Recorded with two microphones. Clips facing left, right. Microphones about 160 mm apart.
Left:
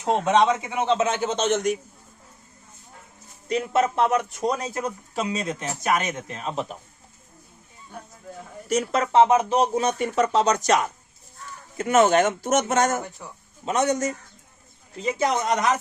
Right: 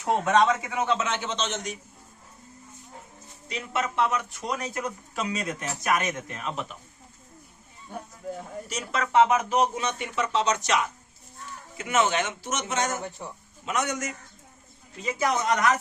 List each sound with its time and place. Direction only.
0.0 s a man's voice: 20° left (ahead or behind)
1.0 s speech: 40° left (ahead or behind); by 1.8 s 55° left (ahead or behind)
3.5 s a man's voice: 40° left (ahead or behind)
8.7 s speech: 35° left (ahead or behind)
13.2 s speech: 25° right (ahead or behind)
13.7 s a man's voice: 30° left (ahead or behind)